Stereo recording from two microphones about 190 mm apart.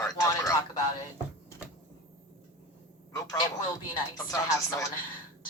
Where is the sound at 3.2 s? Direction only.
20° left (ahead or behind).